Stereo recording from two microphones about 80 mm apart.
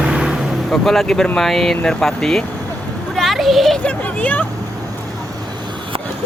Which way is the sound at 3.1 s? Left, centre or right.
Centre.